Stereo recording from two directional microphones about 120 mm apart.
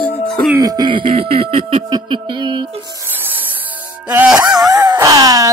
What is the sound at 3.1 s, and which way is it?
Rub, 15° right (ahead or behind).